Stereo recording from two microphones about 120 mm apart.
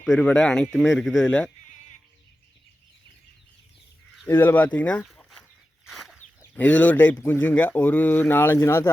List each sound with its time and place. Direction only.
0.0 s speech: 5° left (ahead or behind)
4.3 s speech: 15° left (ahead or behind)
5.8 s chicken: centre (ahead or behind)
6.5 s speech: 10° left (ahead or behind)